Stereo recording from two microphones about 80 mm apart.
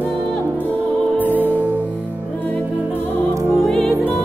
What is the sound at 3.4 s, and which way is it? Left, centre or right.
Music, centre.